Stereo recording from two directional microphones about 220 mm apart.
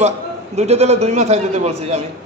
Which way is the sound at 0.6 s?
30° right (ahead or behind).